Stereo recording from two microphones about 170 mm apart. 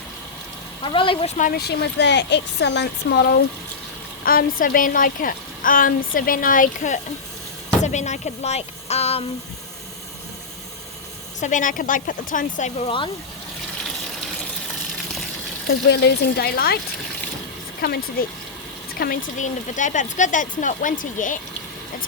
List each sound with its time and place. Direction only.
0.8 s speech: 30° left (ahead or behind)
1.5 s speech: 80° left
4.2 s a woman's voice: 60° left (ahead or behind); by 9.2 s 40° left (ahead or behind)
11.3 s speech: 50° left (ahead or behind)
15.6 s speech: 80° left
17.7 s a woman's voice: 65° left (ahead or behind)
19.4 s speech: 45° left (ahead or behind)